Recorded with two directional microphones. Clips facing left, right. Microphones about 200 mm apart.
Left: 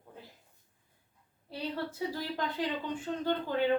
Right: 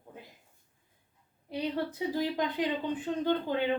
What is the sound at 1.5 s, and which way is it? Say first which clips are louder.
Speech: right 4 dB; 15° right (ahead or behind).